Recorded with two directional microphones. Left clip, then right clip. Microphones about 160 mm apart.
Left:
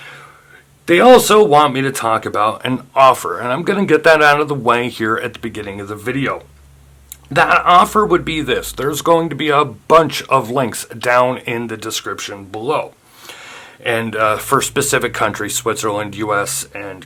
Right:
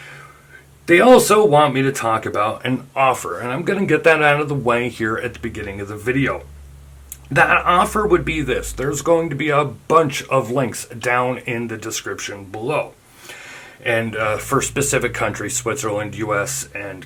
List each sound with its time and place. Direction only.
0.9 s speech: 25° left (ahead or behind)
4.9 s speech: 45° left (ahead or behind)
7.3 s speech: 30° left (ahead or behind)
8.4 s speech: 45° left (ahead or behind)
12.3 s speech: 25° left (ahead or behind)
13.2 s a sound: 25° left (ahead or behind)
14.0 s speech: 45° left (ahead or behind)